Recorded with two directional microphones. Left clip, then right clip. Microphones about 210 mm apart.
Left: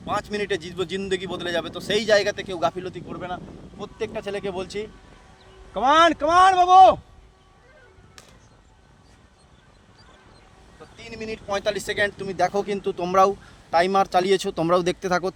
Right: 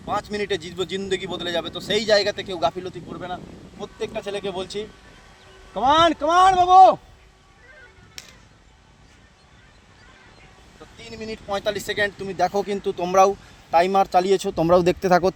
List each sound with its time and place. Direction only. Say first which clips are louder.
0.1 s a man's voice: right 1 dB; 5° right (ahead or behind)
5.7 s a man's voice: even; 5° right (ahead or behind)
8.2 s music: right 8 dB; 35° left (ahead or behind)
11.0 s speech: left 1 dB; 5° right (ahead or behind); by 15.4 s 35° right (ahead or behind)